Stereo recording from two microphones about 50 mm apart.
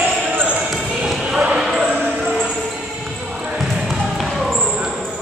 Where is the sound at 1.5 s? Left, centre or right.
Centre.